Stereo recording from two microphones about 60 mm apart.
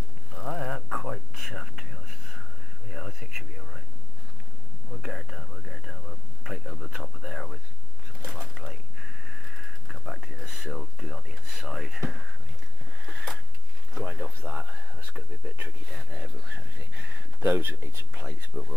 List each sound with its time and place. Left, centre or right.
0.3 s whispering: centre
2.9 s speech: centre
5.0 s speech: centre
13.9 s speech: centre
15.9 s speech: centre
16.5 s speech: right
17.7 s speech: right
18.2 s speech: centre